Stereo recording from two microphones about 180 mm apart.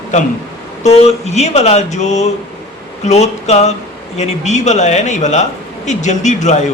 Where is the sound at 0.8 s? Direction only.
35° left (ahead or behind).